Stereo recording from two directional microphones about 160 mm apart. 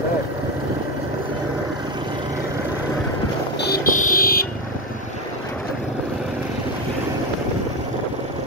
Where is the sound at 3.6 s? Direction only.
65° left (ahead or behind).